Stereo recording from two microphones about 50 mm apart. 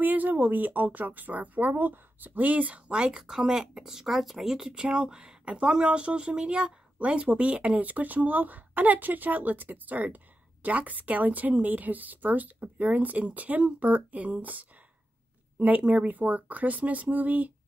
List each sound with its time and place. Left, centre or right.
0.0 s speech: right
2.9 s speech: centre
7.8 s speech: right
15.8 s speech: right